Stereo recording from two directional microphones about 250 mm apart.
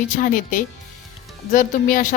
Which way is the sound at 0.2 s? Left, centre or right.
Left.